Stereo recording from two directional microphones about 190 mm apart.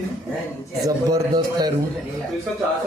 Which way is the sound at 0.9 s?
20° right (ahead or behind).